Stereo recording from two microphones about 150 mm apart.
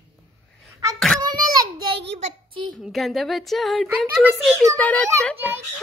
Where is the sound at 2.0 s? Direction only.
45° right (ahead or behind).